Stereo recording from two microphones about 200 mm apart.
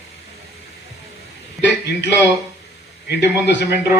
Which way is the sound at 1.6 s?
60° left (ahead or behind).